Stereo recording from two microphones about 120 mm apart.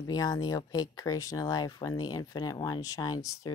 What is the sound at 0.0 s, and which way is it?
Speech, 30° left (ahead or behind).